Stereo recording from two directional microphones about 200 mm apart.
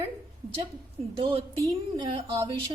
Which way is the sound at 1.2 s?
25° right (ahead or behind).